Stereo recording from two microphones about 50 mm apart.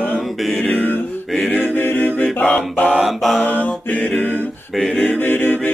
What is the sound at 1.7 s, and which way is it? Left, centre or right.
A capella, left.